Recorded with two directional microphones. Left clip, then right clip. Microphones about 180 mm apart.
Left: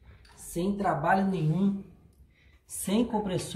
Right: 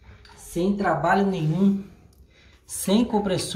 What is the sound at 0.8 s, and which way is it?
Speech, 10° left (ahead or behind).